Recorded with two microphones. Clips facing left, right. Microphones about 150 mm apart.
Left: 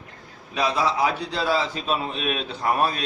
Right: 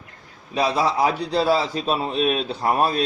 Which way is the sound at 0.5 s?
35° right (ahead or behind).